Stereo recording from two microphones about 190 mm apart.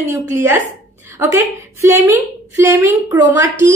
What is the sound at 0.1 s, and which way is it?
A woman's voice, 10° right (ahead or behind).